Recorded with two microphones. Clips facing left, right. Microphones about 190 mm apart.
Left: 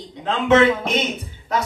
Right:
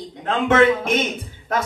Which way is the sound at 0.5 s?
50° right (ahead or behind).